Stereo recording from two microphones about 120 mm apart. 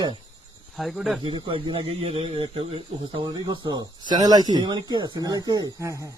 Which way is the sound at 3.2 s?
35° right (ahead or behind).